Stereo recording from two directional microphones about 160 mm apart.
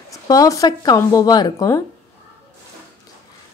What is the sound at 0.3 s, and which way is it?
A woman's voice, 20° left (ahead or behind).